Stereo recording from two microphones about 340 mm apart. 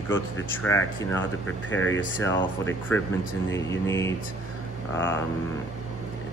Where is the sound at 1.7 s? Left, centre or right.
Left.